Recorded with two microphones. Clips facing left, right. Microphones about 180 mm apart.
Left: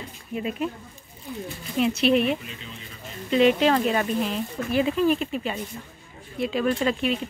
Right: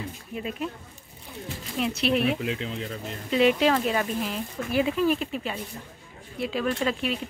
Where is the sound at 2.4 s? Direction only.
90° right.